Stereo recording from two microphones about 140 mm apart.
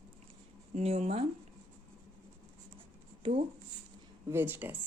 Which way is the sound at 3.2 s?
40° right (ahead or behind).